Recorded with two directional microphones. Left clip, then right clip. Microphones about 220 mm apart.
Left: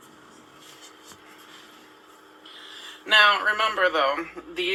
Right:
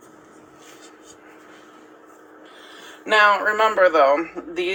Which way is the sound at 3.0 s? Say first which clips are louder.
Right 2 dB; 35° right (ahead or behind).